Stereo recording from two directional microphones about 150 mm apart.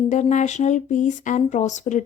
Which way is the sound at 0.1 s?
55° left (ahead or behind).